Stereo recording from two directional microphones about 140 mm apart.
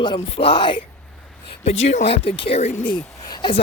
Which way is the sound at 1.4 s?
45° left (ahead or behind).